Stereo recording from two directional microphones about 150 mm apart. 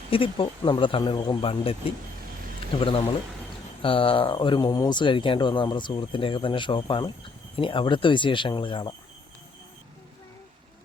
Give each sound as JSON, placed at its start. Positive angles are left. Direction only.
{"t": 0.1, "sound": "speech", "side_deg": 35}
{"t": 2.7, "sound": "speech", "side_deg": 35}